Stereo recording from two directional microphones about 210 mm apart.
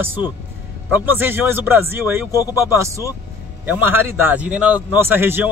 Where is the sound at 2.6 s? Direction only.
15° right (ahead or behind).